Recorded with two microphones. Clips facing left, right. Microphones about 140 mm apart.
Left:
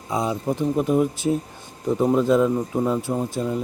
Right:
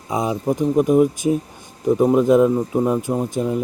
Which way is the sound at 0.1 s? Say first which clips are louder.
Right 3 dB; 20° right (ahead or behind).